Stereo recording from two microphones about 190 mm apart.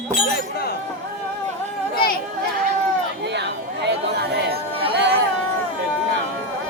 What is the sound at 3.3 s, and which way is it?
Chatter, 65° right (ahead or behind).